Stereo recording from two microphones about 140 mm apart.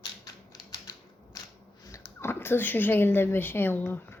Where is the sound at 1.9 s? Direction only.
20° left (ahead or behind).